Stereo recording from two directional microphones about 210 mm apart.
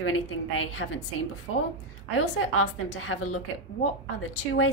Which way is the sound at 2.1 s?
85° left.